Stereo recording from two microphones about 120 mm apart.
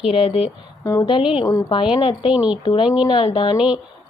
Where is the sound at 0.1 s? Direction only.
55° left (ahead or behind).